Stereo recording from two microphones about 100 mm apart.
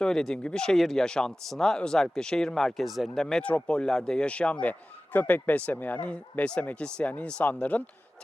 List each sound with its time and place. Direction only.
0.0 s speech: 5° left (ahead or behind)